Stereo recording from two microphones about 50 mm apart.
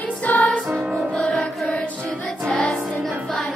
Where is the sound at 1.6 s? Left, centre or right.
Left.